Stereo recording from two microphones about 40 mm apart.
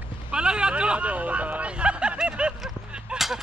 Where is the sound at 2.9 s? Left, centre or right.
Right.